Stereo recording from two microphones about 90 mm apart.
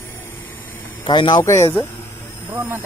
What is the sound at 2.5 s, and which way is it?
Speech, 20° right (ahead or behind).